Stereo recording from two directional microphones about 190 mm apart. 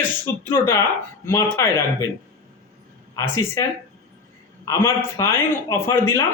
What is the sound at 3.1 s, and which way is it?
Speech, 15° left (ahead or behind).